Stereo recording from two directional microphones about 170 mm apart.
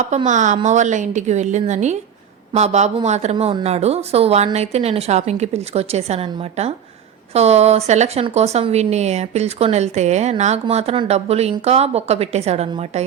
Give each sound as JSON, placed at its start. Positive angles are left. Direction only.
{"t": 0.3, "sound": "a woman's voice", "side_deg": -45}